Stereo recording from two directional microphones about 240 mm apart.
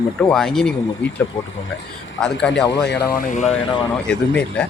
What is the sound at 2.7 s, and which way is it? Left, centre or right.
Speech, left.